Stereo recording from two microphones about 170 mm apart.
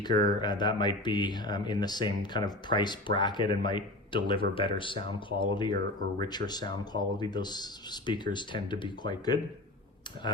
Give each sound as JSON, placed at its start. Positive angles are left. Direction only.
{"t": 0.0, "sound": "speech", "side_deg": 25}